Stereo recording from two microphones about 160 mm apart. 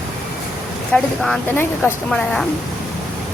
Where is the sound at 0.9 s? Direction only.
Centre (ahead or behind).